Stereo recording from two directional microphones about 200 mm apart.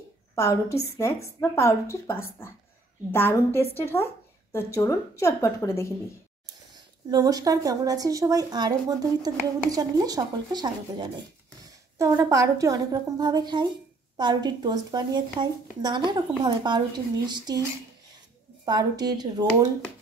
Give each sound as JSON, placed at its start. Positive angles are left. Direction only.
{"t": 0.4, "sound": "a woman's voice", "side_deg": 15}
{"t": 7.1, "sound": "a woman's voice", "side_deg": -20}
{"t": 18.7, "sound": "a woman's voice", "side_deg": -20}